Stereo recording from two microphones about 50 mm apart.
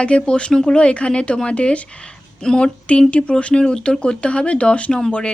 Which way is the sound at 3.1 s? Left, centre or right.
Left.